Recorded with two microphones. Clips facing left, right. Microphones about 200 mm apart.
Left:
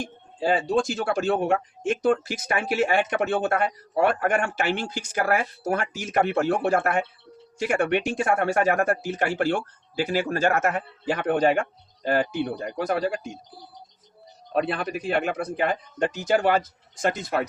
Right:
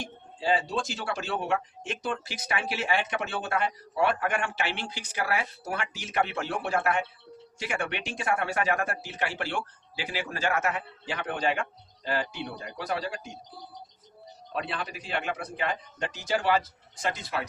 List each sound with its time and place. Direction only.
0.3 s speech: 50° left (ahead or behind)
14.5 s speech: 50° left (ahead or behind)